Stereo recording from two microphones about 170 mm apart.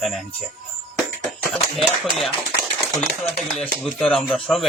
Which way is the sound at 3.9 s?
5° left (ahead or behind).